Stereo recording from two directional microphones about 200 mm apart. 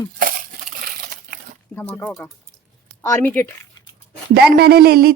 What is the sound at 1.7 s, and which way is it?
Speech, 10° left (ahead or behind).